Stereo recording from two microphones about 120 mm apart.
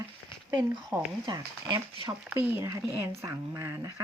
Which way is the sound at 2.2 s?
15° right (ahead or behind).